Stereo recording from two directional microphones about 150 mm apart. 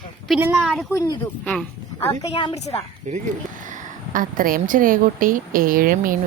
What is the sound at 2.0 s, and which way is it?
Speech, 15° left (ahead or behind).